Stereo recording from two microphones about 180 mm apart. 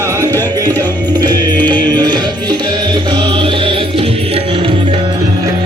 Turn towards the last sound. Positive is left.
turn(degrees=-30)  # may be behind; listen again after turning